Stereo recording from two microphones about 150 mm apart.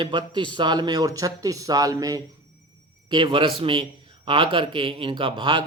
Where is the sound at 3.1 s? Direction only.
35° right (ahead or behind).